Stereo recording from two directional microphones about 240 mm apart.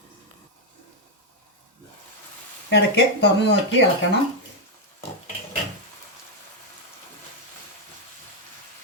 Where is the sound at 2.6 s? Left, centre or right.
Left.